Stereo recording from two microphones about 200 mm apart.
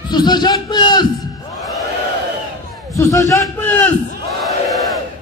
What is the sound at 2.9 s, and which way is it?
A man's voice, 15° left (ahead or behind).